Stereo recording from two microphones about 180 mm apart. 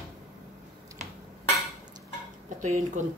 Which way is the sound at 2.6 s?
45° right (ahead or behind).